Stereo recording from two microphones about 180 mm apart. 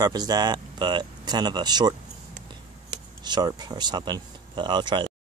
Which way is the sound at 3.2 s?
25° right (ahead or behind).